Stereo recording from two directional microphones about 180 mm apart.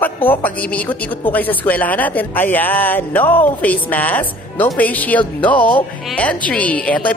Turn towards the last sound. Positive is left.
turn(degrees=10)  # may be behind; listen again after turning